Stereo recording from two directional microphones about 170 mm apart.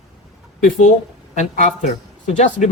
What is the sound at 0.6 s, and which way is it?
Speech, 45° left (ahead or behind).